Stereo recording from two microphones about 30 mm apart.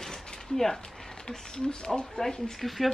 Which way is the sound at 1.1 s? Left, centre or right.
Left.